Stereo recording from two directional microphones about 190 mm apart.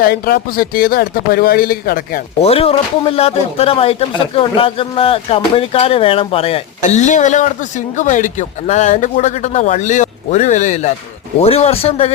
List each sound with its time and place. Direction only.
0.0 s speech: 55° left (ahead or behind)
2.4 s speech: 30° left (ahead or behind)